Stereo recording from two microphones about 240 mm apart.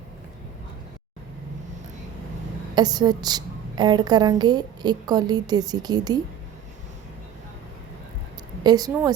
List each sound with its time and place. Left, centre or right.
2.7 s a woman's voice: centre
8.6 s a woman's voice: centre